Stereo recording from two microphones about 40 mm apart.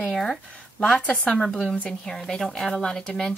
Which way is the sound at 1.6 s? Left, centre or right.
Left.